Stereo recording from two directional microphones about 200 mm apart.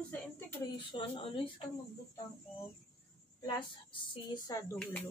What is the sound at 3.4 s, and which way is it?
A woman's voice, 25° left (ahead or behind).